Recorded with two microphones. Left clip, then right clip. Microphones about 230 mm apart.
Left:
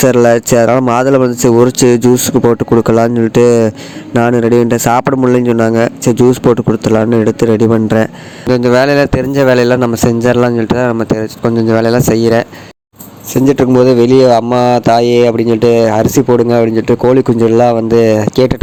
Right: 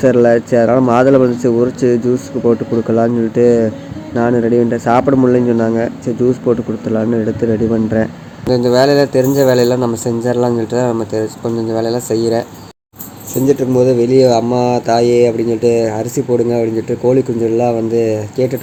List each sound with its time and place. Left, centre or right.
0.0 s speech: left